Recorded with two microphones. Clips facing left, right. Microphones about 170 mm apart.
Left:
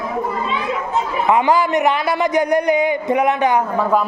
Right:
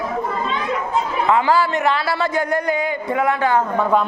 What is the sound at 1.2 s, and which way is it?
A man's voice, 20° left (ahead or behind).